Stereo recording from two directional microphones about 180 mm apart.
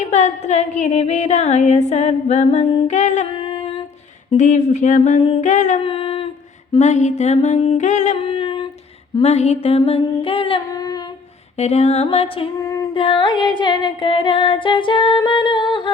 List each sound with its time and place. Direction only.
0.1 s music: 40° left (ahead or behind)
3.3 s music: 30° left (ahead or behind)
4.3 s music: 40° left (ahead or behind)
5.2 s music: 30° left (ahead or behind)
5.5 s music: 40° left (ahead or behind)
5.8 s a sound: 30° left (ahead or behind)
6.7 s music: 40° left (ahead or behind); by 11.0 s 20° left (ahead or behind)
11.5 s music: 35° left (ahead or behind)
12.5 s music: 20° left (ahead or behind)